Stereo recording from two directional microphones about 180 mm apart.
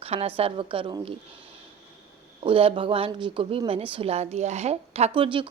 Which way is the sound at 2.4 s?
30° right (ahead or behind).